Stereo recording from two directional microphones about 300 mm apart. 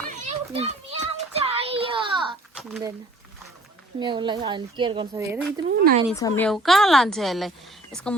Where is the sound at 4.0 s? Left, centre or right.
Centre.